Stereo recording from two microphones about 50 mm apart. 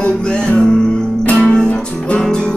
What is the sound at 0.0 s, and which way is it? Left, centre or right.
Music, centre.